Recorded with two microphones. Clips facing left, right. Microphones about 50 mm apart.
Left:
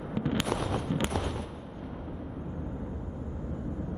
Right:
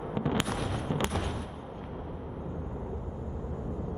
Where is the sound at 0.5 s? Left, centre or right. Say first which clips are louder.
Left 2 dB; left.